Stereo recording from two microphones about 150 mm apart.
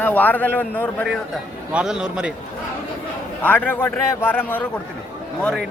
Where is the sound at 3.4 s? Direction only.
10° left (ahead or behind).